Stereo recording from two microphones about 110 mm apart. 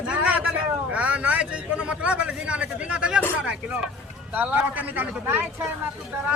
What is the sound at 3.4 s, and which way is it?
A man's voice, 10° right (ahead or behind).